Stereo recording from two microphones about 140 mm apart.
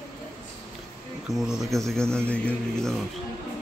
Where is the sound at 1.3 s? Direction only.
5° right (ahead or behind).